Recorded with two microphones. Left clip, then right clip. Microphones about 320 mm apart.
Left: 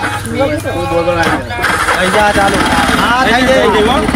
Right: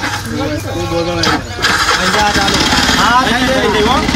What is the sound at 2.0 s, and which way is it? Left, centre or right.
Speech, centre.